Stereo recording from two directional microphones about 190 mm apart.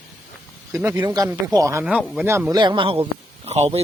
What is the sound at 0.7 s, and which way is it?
Speech, 15° right (ahead or behind).